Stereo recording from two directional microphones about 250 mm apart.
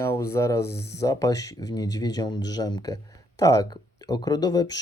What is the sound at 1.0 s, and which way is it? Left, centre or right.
Speech, centre.